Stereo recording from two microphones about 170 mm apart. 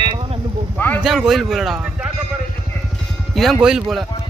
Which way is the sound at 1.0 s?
5° right (ahead or behind).